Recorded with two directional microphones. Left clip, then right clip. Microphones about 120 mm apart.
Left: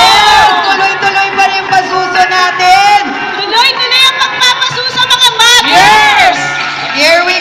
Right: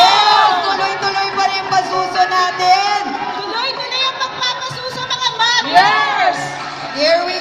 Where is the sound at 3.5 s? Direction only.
60° right (ahead or behind).